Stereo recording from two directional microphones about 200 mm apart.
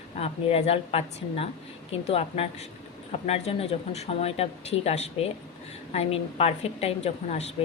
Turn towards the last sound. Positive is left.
turn(degrees=35)  # may be behind; listen again after turning